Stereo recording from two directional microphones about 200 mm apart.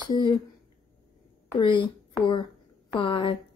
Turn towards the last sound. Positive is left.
turn(degrees=25)  # may be behind; listen again after turning